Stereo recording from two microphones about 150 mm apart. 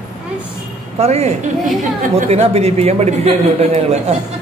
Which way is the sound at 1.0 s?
45° right (ahead or behind).